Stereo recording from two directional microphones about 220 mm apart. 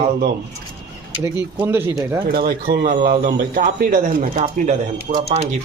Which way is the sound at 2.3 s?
40° right (ahead or behind).